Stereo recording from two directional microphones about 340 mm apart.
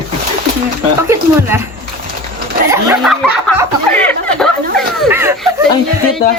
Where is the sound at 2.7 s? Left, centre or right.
Centre.